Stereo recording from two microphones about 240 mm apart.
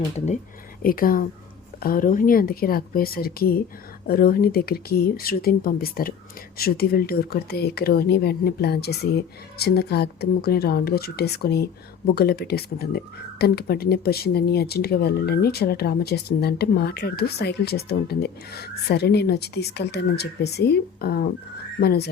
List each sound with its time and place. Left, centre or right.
0.8 s speech: left